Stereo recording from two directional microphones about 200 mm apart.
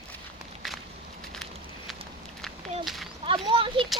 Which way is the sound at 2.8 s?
Centre (ahead or behind).